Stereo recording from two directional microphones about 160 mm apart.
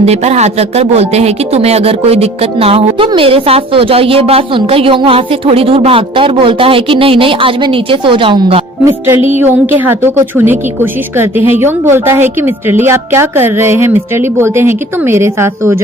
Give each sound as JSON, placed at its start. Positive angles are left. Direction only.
{"t": 0.0, "sound": "speech", "side_deg": -40}
{"t": 8.8, "sound": "a woman's voice", "side_deg": -15}